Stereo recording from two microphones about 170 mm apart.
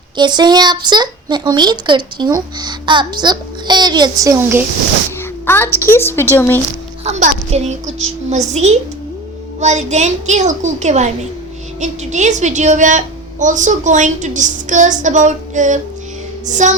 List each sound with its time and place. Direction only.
0.2 s a child's voice: 25° right (ahead or behind)
5.5 s a woman's voice: 15° left (ahead or behind)
7.0 s a child's voice: 45° right (ahead or behind)